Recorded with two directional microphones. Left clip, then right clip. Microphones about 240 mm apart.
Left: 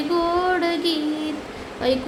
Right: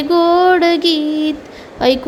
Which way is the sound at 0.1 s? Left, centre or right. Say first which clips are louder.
Right 11 dB; right.